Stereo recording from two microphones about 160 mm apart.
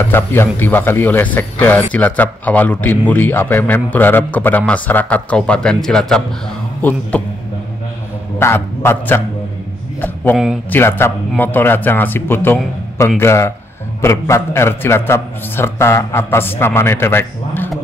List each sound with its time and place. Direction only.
0.1 s speech: 15° left (ahead or behind)
8.4 s speech: 15° left (ahead or behind)
10.3 s a man's voice: 5° right (ahead or behind)
10.7 s speech: 15° left (ahead or behind)